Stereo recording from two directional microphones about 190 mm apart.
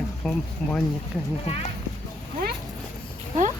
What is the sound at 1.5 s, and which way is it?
Speech, 35° left (ahead or behind).